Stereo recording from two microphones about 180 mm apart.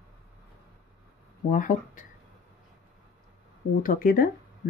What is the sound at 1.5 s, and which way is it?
Speech, 45° left (ahead or behind).